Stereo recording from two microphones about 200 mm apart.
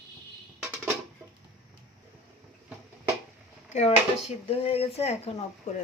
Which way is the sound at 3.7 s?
35° left (ahead or behind).